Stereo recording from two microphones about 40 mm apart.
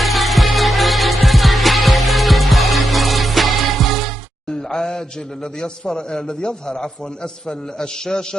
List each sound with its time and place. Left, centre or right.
0.0 s music: centre
4.5 s a sound: centre
5.6 s a man's voice: centre